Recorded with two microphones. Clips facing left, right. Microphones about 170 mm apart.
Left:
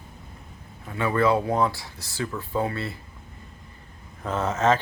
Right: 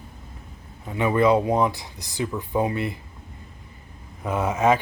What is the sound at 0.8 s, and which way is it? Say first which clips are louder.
Speech: right 3 dB; 20° right (ahead or behind).